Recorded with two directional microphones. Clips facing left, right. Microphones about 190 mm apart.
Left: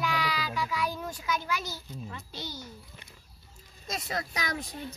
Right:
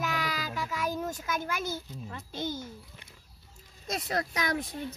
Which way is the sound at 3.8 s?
55° right (ahead or behind).